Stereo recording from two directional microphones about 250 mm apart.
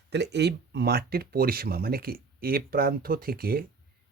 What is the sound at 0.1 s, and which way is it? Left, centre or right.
Speech, right.